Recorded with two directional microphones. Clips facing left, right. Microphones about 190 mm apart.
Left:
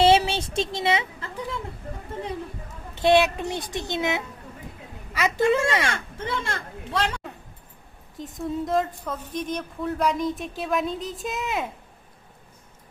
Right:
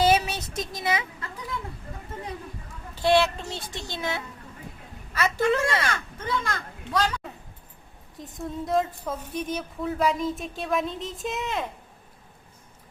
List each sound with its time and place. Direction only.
0.0 s a sound: 30° left (ahead or behind)
2.9 s a child's voice: 20° left (ahead or behind)
5.8 s a child's voice: 25° left (ahead or behind)
8.2 s speech: centre (ahead or behind)